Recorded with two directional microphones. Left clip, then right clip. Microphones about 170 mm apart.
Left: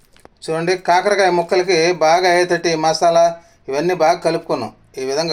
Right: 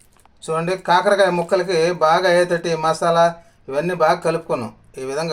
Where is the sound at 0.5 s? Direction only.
5° left (ahead or behind).